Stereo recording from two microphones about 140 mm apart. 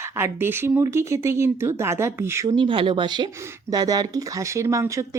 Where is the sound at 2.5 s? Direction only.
35° right (ahead or behind).